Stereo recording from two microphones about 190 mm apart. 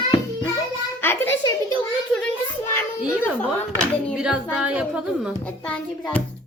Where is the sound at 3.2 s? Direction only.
10° left (ahead or behind).